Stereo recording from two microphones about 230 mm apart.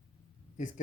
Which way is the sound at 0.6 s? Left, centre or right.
Left.